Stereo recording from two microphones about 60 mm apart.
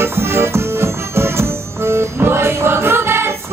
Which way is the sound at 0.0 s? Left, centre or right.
Right.